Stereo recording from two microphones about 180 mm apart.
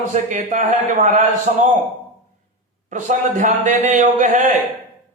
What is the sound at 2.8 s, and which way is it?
A man's voice, 45° right (ahead or behind).